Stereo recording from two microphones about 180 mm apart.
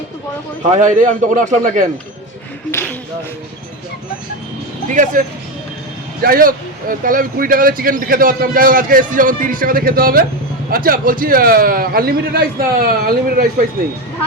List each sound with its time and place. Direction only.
0.6 s speech: 45° right (ahead or behind)
2.7 s a sound: 15° left (ahead or behind)
4.9 s speech: 45° right (ahead or behind)
6.2 s speech: 50° right (ahead or behind)